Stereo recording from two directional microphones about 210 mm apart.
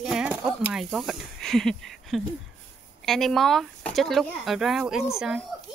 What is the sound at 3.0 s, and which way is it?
Speech, centre (ahead or behind).